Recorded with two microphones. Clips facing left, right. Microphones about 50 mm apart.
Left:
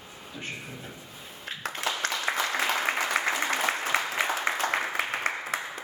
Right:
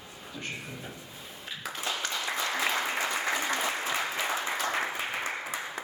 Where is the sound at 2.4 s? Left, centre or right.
Left.